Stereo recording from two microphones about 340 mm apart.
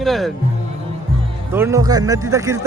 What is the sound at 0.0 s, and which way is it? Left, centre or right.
Speech, centre.